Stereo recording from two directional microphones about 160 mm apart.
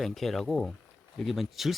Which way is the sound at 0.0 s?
Centre (ahead or behind).